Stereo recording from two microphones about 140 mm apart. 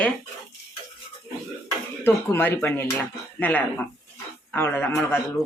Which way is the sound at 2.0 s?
15° left (ahead or behind).